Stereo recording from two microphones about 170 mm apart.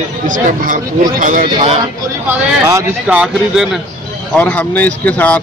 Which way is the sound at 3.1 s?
5° right (ahead or behind).